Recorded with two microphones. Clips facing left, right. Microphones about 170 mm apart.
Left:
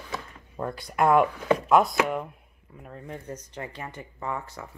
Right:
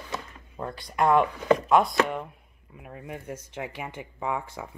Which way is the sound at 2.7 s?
10° right (ahead or behind).